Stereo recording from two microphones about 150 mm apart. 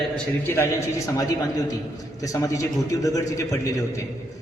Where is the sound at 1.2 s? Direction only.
25° left (ahead or behind).